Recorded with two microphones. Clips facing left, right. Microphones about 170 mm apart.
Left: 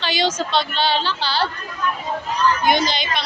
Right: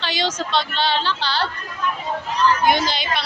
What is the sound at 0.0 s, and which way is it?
Speech, 5° left (ahead or behind).